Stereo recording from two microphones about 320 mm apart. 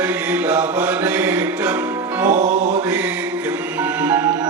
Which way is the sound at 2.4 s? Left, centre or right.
Right.